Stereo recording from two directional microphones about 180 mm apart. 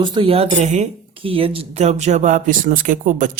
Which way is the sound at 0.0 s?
25° right (ahead or behind).